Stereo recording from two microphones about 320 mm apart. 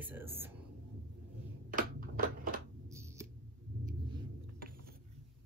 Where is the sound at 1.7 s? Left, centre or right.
Right.